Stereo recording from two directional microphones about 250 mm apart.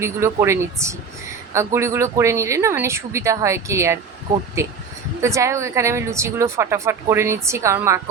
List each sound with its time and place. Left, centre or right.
0.0 s speech: centre
5.2 s speech: centre